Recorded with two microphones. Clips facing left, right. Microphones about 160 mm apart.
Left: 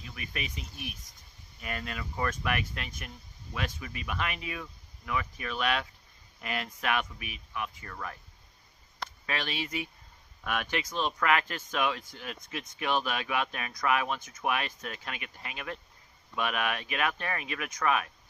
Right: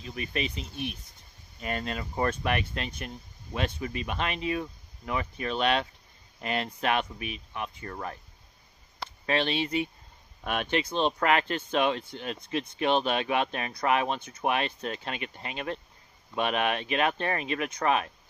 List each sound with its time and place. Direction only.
0.0 s speech: 30° right (ahead or behind)
9.2 s speech: 25° right (ahead or behind)